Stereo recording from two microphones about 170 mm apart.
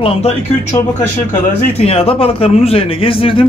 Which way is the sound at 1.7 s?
35° left (ahead or behind).